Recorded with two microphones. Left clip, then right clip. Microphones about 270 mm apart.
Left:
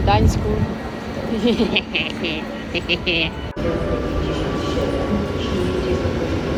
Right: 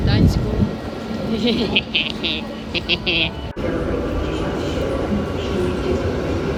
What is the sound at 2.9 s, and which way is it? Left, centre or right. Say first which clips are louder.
Speech: right 1 dB; centre.